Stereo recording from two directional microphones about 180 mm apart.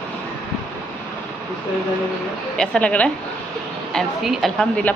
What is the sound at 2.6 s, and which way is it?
A woman's voice, 5° left (ahead or behind).